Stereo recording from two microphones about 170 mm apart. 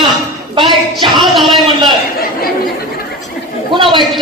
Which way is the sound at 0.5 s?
30° right (ahead or behind).